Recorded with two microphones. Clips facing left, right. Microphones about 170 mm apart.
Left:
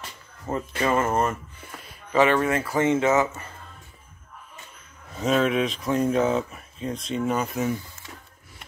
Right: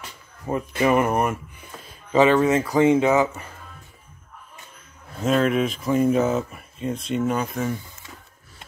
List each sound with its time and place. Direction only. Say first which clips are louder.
0.5 s speech: right 4 dB; 15° right (ahead or behind)
5.1 s speech: right 2 dB; centre (ahead or behind)